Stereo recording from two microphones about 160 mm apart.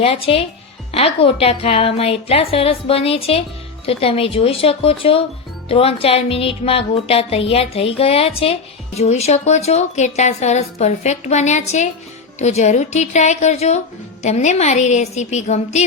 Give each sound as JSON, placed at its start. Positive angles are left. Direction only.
{"t": 0.0, "sound": "a woman's voice", "side_deg": 35}